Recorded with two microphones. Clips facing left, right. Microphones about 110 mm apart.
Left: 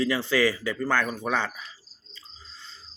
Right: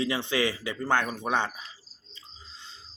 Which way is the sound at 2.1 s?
20° right (ahead or behind).